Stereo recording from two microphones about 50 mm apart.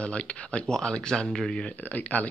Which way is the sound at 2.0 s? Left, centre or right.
Left.